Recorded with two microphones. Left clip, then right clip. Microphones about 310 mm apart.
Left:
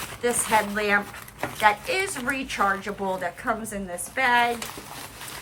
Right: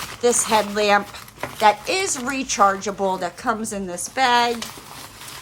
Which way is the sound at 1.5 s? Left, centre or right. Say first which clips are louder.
Right 4 dB; centre.